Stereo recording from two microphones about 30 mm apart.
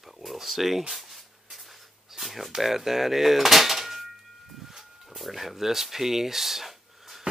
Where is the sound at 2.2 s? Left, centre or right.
Centre.